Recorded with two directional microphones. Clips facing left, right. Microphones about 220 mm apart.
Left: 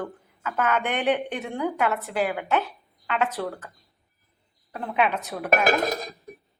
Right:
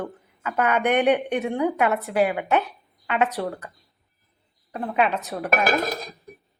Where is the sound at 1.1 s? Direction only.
Centre (ahead or behind).